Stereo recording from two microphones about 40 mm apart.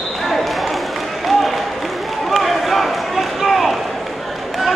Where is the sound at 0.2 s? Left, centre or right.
Centre.